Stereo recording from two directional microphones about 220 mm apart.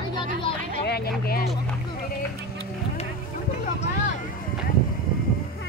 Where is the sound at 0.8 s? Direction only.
45° left (ahead or behind).